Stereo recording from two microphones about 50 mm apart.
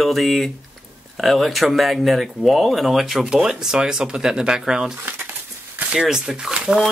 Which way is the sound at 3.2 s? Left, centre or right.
Centre.